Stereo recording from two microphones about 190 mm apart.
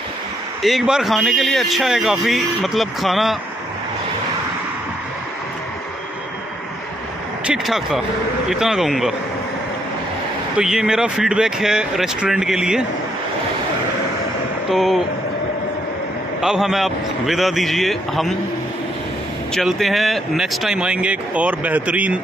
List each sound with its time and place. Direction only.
0.6 s speech: centre (ahead or behind)
7.4 s speech: 5° right (ahead or behind)
10.6 s speech: 5° right (ahead or behind)
14.7 s speech: centre (ahead or behind)
16.3 s speech: 5° right (ahead or behind)
19.5 s speech: centre (ahead or behind)